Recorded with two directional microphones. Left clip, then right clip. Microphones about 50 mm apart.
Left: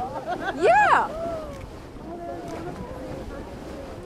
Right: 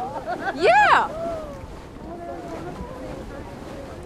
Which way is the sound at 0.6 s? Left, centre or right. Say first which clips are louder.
Right 2 dB; centre.